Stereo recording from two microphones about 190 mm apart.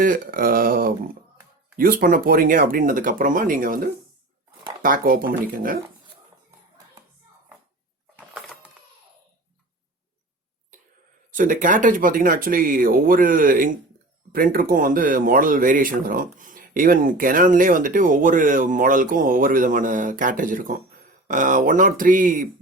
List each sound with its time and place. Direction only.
0.0 s speech: 45° right (ahead or behind)
8.3 s a sound: centre (ahead or behind)
11.3 s speech: 45° right (ahead or behind)